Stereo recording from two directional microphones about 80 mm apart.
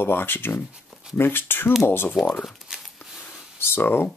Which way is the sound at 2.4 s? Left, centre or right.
Centre.